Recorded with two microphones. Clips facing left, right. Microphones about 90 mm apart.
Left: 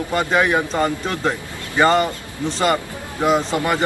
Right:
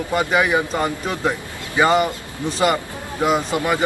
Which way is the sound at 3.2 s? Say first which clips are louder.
Left 1 dB; 5° right (ahead or behind).